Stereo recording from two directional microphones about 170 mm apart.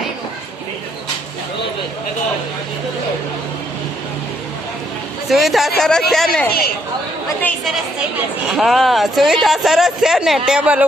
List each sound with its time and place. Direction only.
5.3 s speech: centre (ahead or behind)